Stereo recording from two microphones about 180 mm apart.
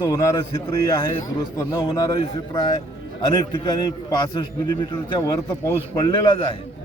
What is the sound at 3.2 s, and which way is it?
A man's voice, 25° left (ahead or behind).